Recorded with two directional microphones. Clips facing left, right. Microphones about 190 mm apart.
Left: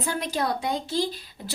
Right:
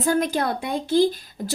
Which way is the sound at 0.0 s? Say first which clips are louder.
Right 6 dB; 45° right (ahead or behind).